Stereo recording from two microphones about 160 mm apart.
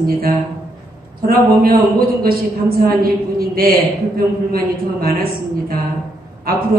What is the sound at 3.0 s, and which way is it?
Speech, 70° right (ahead or behind).